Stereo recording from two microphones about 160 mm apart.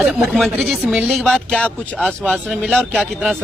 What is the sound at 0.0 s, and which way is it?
A woman's voice, centre (ahead or behind).